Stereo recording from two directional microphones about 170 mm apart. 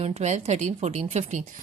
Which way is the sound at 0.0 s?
40° right (ahead or behind).